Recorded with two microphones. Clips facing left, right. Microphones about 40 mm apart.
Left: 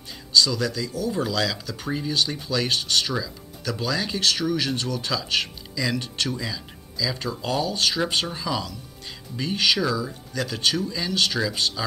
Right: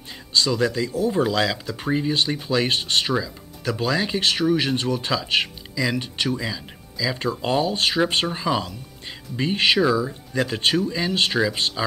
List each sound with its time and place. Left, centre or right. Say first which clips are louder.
0.1 s speech: left 1 dB; right